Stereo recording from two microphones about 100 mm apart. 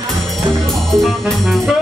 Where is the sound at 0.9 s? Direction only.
5° left (ahead or behind).